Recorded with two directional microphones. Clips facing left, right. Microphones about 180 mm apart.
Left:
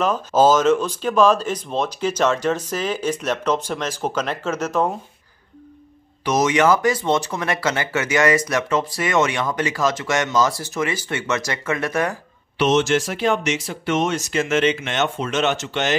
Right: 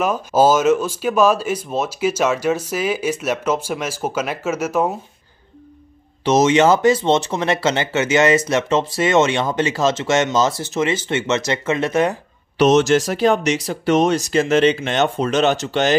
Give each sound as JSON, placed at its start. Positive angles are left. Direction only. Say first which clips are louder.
{"t": 0.0, "sound": "speech", "louder": "right 1 dB", "side_deg": -10}
{"t": 6.2, "sound": "speech", "louder": "right 4 dB", "side_deg": -25}
{"t": 12.5, "sound": "speech", "louder": "right 4 dB", "side_deg": -40}